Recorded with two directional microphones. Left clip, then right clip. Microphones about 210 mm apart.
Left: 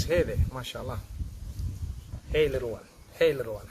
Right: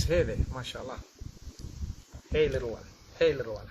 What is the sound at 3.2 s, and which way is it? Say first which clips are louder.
Speech: left 2 dB; 15° left (ahead or behind).